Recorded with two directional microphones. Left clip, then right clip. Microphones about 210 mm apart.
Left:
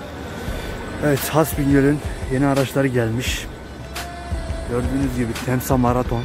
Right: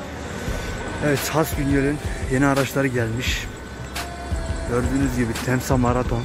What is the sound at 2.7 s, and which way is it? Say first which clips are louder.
Speech: left 3 dB; 15° left (ahead or behind).